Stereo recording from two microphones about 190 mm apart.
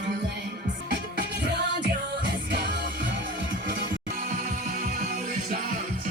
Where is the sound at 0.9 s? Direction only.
60° right (ahead or behind).